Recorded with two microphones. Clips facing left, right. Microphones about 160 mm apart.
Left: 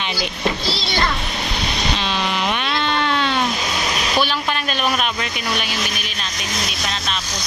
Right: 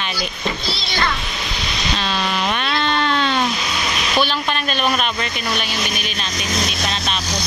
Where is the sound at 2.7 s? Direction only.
10° left (ahead or behind).